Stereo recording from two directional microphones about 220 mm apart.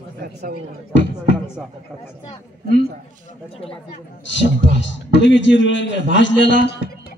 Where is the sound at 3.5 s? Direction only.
25° left (ahead or behind).